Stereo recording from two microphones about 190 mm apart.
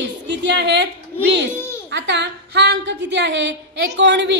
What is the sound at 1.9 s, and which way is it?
A woman's voice, 65° right (ahead or behind).